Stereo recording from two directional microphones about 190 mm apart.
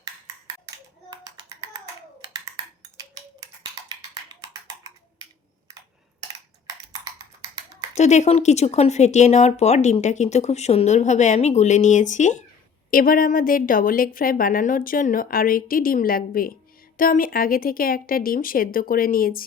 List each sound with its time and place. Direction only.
1.1 s clapping: 20° right (ahead or behind)
3.8 s a sound: 20° right (ahead or behind)
7.9 s a woman's voice: 35° left (ahead or behind)